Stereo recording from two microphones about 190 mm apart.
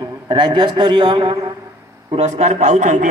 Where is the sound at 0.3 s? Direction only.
25° right (ahead or behind).